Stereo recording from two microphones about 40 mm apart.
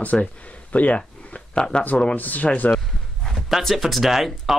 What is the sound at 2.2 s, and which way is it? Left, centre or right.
Speech, left.